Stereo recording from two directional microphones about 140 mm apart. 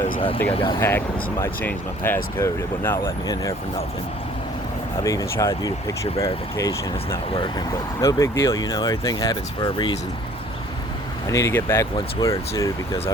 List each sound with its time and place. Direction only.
0.5 s speech: 35° left (ahead or behind)
0.8 s speech: 15° left (ahead or behind)
5.0 s speech: 25° left (ahead or behind)
11.3 s speech: 20° left (ahead or behind)